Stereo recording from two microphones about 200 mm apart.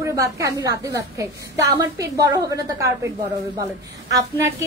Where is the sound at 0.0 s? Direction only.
15° right (ahead or behind).